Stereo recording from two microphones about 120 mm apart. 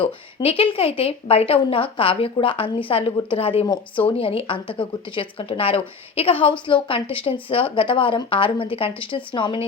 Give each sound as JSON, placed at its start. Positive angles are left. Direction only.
{"t": 0.4, "sound": "speech", "side_deg": 50}